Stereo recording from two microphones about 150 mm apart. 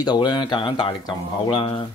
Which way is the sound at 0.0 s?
30° left (ahead or behind).